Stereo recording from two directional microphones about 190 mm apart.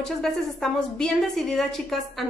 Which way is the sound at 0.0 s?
Centre (ahead or behind).